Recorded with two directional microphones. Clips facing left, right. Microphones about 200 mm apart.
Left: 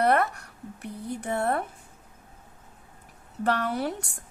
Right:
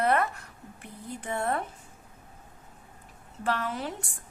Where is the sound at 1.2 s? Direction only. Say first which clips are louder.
Left 3 dB; 60° left (ahead or behind).